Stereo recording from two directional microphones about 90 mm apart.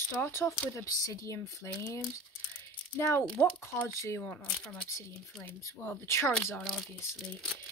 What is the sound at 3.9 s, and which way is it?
Speech, 35° left (ahead or behind).